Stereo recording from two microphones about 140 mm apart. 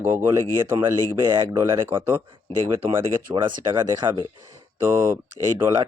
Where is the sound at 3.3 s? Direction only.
35° right (ahead or behind).